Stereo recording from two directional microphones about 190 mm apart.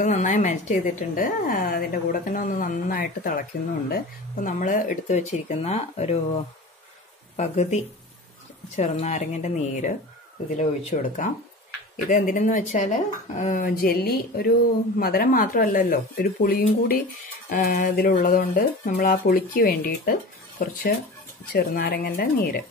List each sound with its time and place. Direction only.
0.0 s speech: 40° left (ahead or behind)
7.3 s speech: 40° left (ahead or behind)